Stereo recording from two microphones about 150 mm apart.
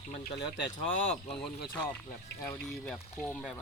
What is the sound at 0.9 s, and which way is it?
Speech, 50° left (ahead or behind).